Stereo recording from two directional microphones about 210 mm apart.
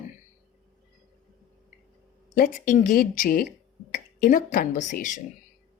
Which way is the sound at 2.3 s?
40° left (ahead or behind).